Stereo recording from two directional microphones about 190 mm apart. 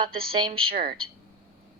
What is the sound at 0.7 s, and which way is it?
Speech, 50° right (ahead or behind).